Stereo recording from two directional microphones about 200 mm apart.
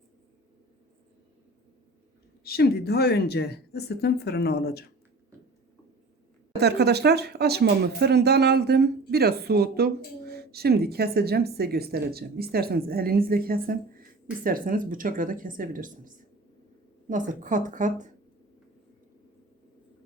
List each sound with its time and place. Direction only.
2.4 s speech: 50° left (ahead or behind)
6.6 s a woman's voice: 55° right (ahead or behind); by 18.1 s 40° right (ahead or behind)